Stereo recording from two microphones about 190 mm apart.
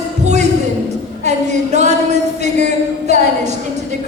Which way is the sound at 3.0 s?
35° right (ahead or behind).